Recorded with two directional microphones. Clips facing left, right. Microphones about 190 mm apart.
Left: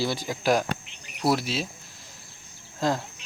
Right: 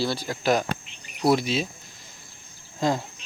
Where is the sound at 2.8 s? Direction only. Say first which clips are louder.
Right 1 dB; centre (ahead or behind).